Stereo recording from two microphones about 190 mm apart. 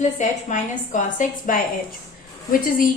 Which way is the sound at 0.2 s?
40° left (ahead or behind).